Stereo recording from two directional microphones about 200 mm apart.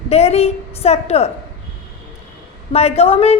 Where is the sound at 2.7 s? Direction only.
30° left (ahead or behind).